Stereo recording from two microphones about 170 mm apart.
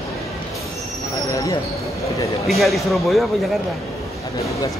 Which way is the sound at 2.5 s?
Centre (ahead or behind).